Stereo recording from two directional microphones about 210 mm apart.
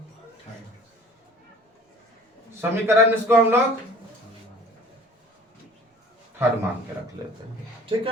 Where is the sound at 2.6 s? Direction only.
10° right (ahead or behind).